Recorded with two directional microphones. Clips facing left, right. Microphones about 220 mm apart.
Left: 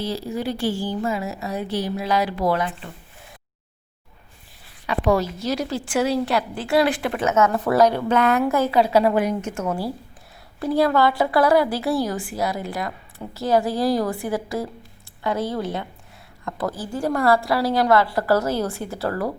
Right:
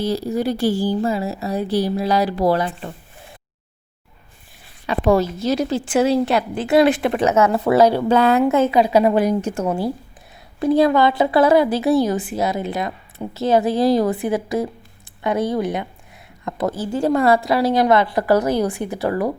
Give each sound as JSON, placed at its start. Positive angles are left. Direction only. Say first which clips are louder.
{"t": 0.0, "sound": "a woman's voice", "louder": "right 5 dB", "side_deg": -40}
{"t": 4.9, "sound": "a woman's voice", "louder": "right 4 dB", "side_deg": -25}
{"t": 9.1, "sound": "a woman's voice", "louder": "right 4 dB", "side_deg": -35}